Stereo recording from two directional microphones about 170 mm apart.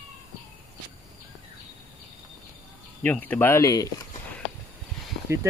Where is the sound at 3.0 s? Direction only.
10° left (ahead or behind).